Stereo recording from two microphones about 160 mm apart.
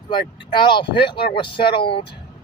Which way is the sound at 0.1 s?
30° left (ahead or behind).